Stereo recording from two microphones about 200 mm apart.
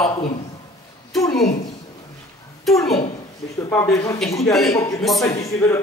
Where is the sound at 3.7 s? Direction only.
15° left (ahead or behind).